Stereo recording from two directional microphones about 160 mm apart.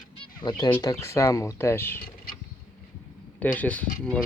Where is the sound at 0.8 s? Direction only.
20° left (ahead or behind).